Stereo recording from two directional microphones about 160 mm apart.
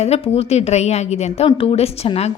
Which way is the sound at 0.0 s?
40° left (ahead or behind).